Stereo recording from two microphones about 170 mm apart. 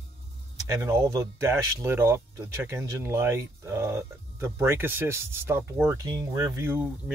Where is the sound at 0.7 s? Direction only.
15° right (ahead or behind).